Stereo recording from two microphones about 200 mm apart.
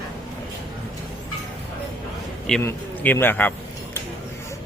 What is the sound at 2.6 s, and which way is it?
Speech, 10° left (ahead or behind).